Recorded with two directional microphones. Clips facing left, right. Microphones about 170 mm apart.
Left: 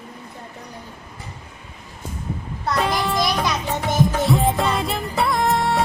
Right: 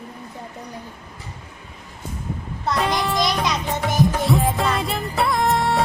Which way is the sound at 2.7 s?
Centre (ahead or behind).